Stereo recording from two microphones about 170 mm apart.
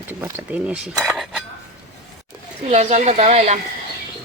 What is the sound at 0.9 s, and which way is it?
Cutlery, centre (ahead or behind).